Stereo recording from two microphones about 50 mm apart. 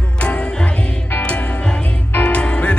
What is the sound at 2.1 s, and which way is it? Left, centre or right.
Music, left.